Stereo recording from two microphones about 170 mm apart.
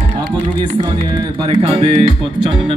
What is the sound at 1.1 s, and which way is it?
Speech, 30° right (ahead or behind).